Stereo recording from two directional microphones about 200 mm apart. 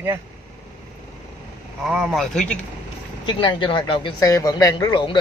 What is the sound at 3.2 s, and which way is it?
Speech, 25° left (ahead or behind).